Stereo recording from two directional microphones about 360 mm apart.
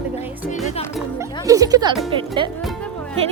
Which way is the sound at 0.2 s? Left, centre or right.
Centre.